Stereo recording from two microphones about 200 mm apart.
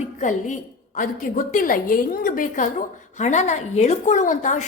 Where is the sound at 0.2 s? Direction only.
40° left (ahead or behind).